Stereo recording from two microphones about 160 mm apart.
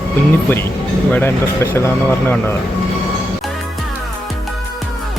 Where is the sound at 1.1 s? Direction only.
10° left (ahead or behind).